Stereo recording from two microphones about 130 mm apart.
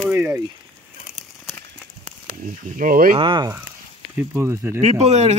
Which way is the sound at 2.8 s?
90° right.